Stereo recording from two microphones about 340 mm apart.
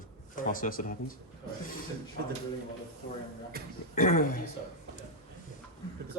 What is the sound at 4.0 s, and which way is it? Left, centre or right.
Speech, left.